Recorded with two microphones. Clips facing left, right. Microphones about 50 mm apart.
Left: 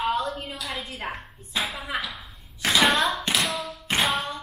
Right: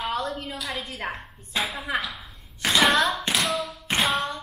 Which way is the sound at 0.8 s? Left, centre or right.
Centre.